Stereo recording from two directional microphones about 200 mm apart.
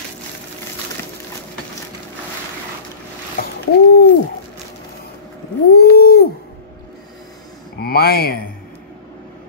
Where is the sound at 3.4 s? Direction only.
50° left (ahead or behind).